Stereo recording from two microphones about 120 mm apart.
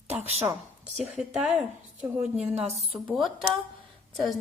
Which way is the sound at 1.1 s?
10° right (ahead or behind).